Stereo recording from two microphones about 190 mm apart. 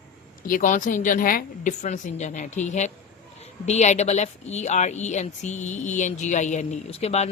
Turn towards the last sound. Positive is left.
turn(degrees=35)  # may be behind; listen again after turning